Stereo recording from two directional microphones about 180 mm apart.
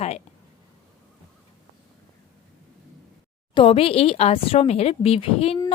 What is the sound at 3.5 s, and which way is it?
Speech, 30° left (ahead or behind).